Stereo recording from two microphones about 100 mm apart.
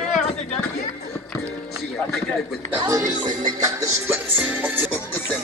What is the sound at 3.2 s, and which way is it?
Music, 40° right (ahead or behind).